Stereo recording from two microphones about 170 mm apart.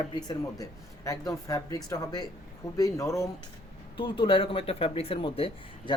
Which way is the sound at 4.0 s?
30° left (ahead or behind).